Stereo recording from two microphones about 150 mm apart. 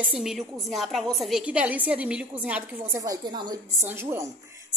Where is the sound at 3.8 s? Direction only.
15° right (ahead or behind).